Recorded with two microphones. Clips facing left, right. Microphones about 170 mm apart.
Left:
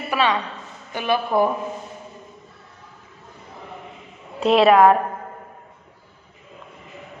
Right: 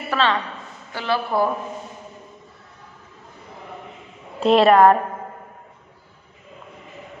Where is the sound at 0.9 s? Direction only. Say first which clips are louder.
Left 2 dB; 20° left (ahead or behind).